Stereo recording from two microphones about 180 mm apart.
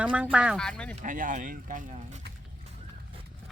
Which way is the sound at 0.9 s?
45° right (ahead or behind).